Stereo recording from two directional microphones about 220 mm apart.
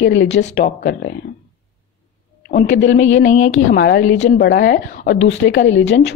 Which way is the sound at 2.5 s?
55° left (ahead or behind).